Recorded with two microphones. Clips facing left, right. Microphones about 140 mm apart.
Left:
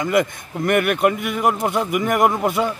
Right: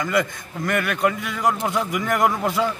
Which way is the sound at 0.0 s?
20° left (ahead or behind).